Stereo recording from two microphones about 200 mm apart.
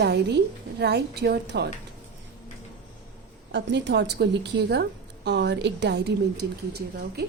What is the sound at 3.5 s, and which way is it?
A woman's voice, 60° right (ahead or behind).